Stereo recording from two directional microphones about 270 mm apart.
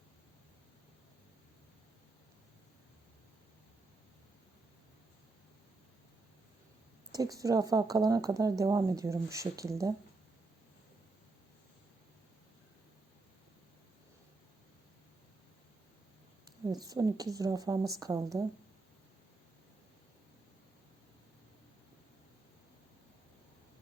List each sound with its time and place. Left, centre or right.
7.1 s speech: centre
16.6 s speech: centre